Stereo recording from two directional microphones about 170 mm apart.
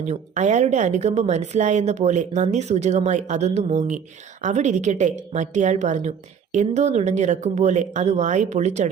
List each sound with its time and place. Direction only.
0.0 s speech: 45° right (ahead or behind)